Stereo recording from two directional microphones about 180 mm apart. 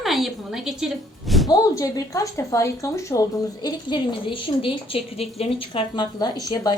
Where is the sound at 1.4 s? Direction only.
20° left (ahead or behind).